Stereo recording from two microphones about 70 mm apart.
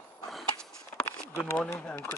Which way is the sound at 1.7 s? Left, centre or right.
Centre.